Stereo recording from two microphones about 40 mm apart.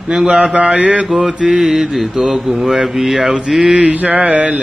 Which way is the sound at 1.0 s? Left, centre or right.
Centre.